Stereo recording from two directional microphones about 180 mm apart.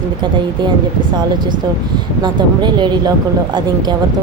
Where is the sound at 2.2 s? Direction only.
25° right (ahead or behind).